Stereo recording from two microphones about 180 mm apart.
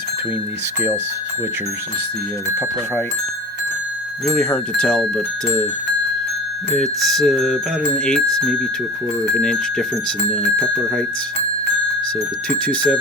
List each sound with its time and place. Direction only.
4.4 s speech: 5° left (ahead or behind)
6.7 s speech: centre (ahead or behind)
12.6 s speech: 5° left (ahead or behind)